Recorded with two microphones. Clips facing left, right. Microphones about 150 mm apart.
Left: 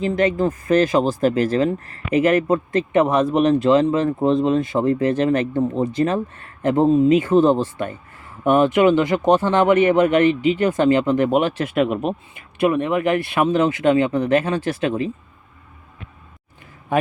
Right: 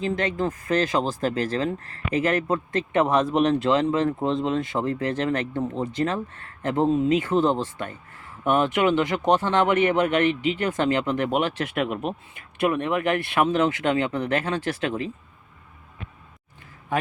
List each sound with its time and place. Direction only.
0.0 s speech: 10° left (ahead or behind)
11.8 s speech: 40° left (ahead or behind)
12.5 s speech: 5° left (ahead or behind)